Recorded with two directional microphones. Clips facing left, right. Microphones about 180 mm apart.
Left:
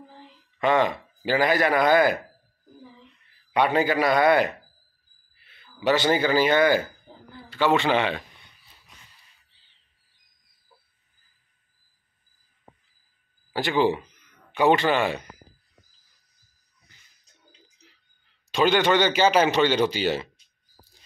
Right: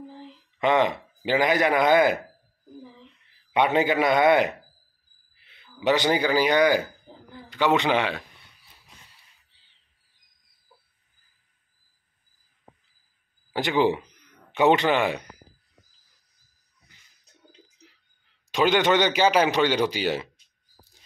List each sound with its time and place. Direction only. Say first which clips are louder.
0.6 s a man's voice: even; 20° right (ahead or behind)
3.5 s a man's voice: even; 20° right (ahead or behind)
13.5 s a man's voice: even; 15° right (ahead or behind)
18.5 s a man's voice: even; 15° right (ahead or behind)